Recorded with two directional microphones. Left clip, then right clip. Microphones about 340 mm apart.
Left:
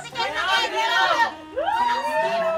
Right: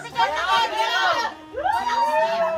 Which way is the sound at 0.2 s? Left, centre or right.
Right.